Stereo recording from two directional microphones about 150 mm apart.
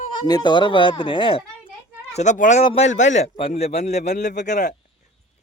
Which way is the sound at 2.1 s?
55° left (ahead or behind).